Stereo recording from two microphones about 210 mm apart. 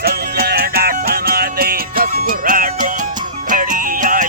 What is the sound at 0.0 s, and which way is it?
Music, 50° right (ahead or behind).